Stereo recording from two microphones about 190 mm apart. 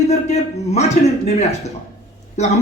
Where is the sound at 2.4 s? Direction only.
35° left (ahead or behind).